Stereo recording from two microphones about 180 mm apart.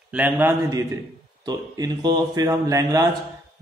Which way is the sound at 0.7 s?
20° right (ahead or behind).